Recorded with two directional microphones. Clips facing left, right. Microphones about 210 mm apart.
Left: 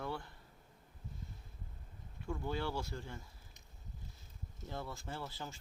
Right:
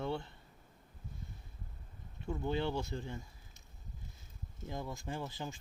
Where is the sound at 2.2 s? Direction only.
20° right (ahead or behind).